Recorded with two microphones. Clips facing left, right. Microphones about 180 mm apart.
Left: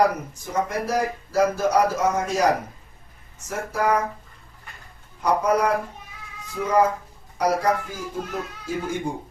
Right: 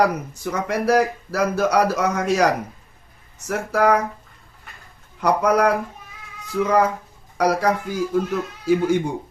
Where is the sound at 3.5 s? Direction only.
75° right (ahead or behind).